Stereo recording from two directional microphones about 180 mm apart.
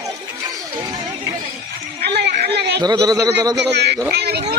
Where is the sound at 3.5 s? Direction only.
70° right (ahead or behind).